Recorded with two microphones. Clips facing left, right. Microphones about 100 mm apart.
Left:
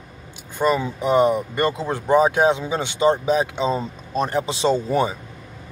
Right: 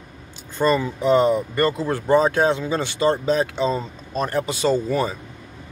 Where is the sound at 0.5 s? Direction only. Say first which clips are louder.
Right 1 dB; 15° left (ahead or behind).